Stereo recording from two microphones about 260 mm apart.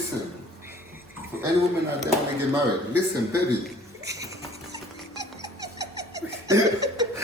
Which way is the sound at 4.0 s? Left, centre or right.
Centre.